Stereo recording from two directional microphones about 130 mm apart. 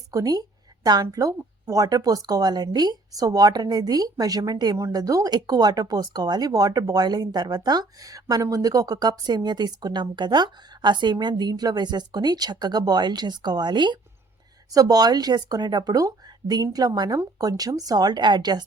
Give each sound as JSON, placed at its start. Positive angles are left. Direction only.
{"t": 0.1, "sound": "speech", "side_deg": -30}